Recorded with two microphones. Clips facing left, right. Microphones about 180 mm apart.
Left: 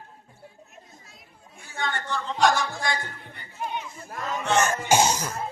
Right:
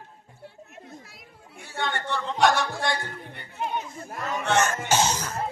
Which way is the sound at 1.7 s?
65° right (ahead or behind).